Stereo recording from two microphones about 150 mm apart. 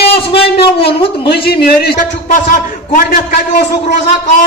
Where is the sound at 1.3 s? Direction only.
90° left; by 3.6 s 70° left (ahead or behind).